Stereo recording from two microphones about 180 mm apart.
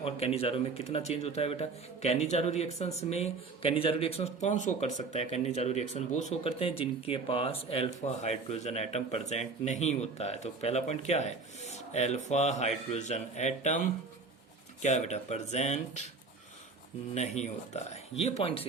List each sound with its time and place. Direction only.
0.0 s speech: 35° left (ahead or behind)
17.2 s speech: 40° left (ahead or behind)